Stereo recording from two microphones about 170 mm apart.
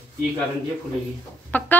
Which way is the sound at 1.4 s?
10° left (ahead or behind).